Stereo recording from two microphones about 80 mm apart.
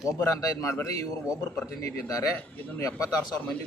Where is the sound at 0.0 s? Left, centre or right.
Left.